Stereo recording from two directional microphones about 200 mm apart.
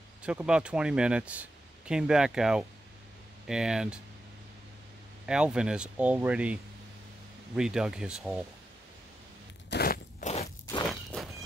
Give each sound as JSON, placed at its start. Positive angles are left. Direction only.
{"t": 0.2, "sound": "speech", "side_deg": -5}
{"t": 5.2, "sound": "speech", "side_deg": -5}
{"t": 9.7, "sound": "biting", "side_deg": 50}
{"t": 10.2, "sound": "scrape", "side_deg": 40}
{"t": 10.9, "sound": "walk", "side_deg": 0}